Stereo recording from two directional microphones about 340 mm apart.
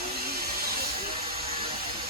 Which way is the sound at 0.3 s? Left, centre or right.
Right.